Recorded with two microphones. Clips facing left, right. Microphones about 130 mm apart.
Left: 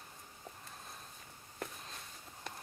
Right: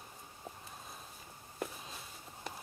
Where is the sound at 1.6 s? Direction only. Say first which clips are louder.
Right 3 dB; 5° right (ahead or behind).